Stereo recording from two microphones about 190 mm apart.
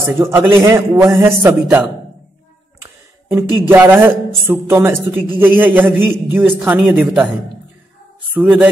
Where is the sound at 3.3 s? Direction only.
10° right (ahead or behind).